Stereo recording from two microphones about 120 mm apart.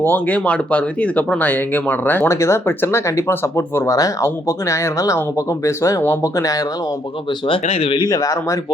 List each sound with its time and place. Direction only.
0.0 s speech: 15° left (ahead or behind)
7.3 s speech: 45° left (ahead or behind)
7.6 s speech: 60° left (ahead or behind)
7.9 s speech: 30° left (ahead or behind)